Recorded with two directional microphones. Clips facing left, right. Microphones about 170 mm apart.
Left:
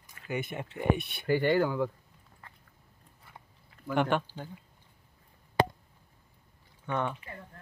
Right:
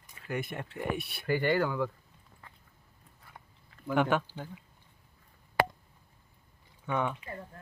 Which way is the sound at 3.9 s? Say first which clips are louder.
Even; 5° right (ahead or behind).